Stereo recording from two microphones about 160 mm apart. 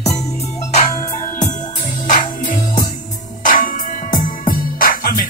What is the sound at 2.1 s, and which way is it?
Music, 55° left (ahead or behind).